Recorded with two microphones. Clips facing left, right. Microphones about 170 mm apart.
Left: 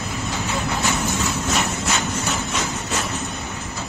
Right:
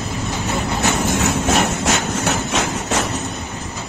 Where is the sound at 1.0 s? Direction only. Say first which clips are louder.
Right 5 dB; 90° right.